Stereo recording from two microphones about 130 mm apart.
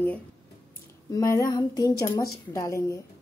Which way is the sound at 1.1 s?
25° left (ahead or behind).